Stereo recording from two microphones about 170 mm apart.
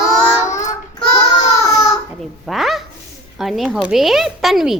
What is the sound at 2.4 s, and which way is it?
Honk, centre (ahead or behind).